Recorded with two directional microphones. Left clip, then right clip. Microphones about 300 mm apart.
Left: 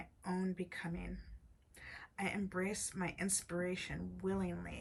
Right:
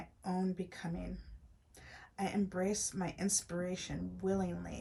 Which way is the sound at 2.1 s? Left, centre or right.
Centre.